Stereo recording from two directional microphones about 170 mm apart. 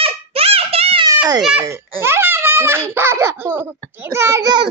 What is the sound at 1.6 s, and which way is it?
A child's voice, 15° right (ahead or behind).